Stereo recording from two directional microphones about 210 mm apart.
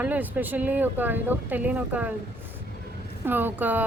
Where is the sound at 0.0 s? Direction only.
10° right (ahead or behind).